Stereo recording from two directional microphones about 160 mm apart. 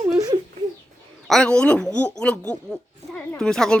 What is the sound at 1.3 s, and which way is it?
Speech, 5° left (ahead or behind).